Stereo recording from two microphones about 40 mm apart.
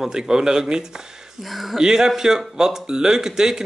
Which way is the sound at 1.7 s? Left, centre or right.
Centre.